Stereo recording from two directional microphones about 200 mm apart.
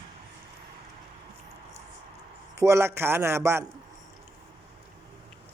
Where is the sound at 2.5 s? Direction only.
15° right (ahead or behind).